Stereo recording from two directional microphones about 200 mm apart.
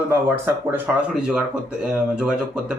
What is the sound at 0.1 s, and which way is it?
Speech, 10° right (ahead or behind).